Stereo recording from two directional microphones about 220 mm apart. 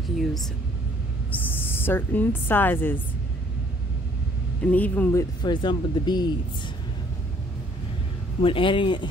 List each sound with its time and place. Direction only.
1.4 s a woman's voice: 10° left (ahead or behind)
4.6 s speech: 5° left (ahead or behind)
5.4 s speech: 20° left (ahead or behind)
8.4 s speech: 25° left (ahead or behind)